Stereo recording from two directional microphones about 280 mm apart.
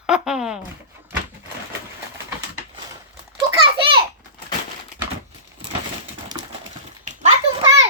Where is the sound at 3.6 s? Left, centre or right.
Centre.